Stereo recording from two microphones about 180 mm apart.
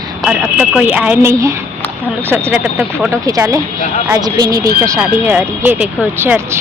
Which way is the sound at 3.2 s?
20° right (ahead or behind).